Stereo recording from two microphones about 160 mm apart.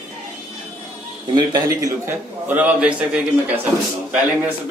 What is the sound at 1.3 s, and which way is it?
A man's voice, 25° right (ahead or behind).